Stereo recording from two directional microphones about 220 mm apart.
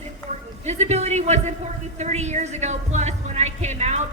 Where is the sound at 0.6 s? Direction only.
30° right (ahead or behind).